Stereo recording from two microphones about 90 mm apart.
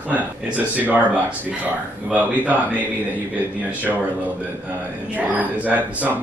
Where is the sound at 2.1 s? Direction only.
15° right (ahead or behind).